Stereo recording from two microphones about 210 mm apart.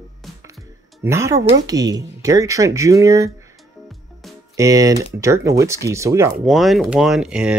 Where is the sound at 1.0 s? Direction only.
15° right (ahead or behind).